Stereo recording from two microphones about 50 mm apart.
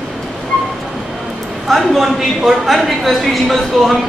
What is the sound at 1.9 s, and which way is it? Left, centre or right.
Speech, centre.